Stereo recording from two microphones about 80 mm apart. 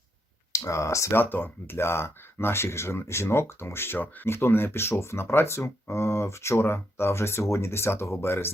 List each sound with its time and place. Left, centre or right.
0.5 s speech: left
1.1 s speech: left